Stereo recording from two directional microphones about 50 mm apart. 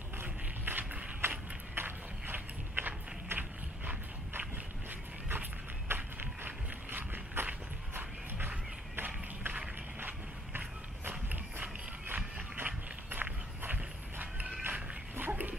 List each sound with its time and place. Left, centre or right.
0.2 s a sound: right
5.3 s run: right
7.9 s a sound: right
11.1 s run: right
12.6 s walk: right
14.6 s dog: right